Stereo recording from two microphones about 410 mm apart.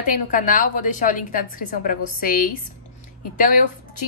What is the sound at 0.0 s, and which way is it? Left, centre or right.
A woman's voice, centre.